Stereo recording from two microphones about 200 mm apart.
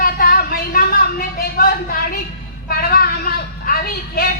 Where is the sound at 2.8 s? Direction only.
50° left (ahead or behind).